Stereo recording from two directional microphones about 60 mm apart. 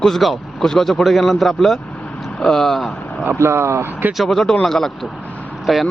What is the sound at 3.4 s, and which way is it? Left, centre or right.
Speech, right.